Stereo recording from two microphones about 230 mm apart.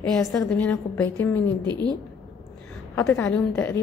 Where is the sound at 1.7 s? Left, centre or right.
Centre.